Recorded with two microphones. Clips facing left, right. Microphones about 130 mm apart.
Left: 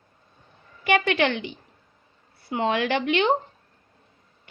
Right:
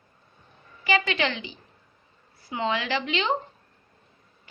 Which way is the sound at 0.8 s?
60° left (ahead or behind).